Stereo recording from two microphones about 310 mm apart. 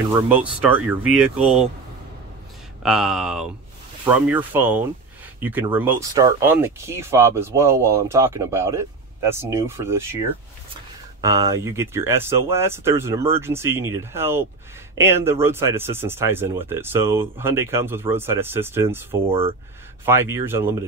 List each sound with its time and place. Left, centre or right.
0.3 s speech: centre
2.8 s speech: centre
11.1 s speech: centre
19.2 s speech: centre